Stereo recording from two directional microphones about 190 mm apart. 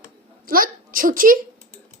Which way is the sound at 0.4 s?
50° right (ahead or behind).